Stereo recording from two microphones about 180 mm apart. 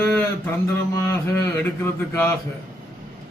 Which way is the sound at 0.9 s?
15° left (ahead or behind).